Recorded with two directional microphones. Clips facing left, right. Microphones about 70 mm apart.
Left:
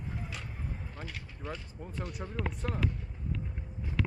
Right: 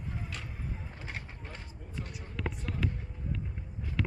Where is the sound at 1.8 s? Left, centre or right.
Left.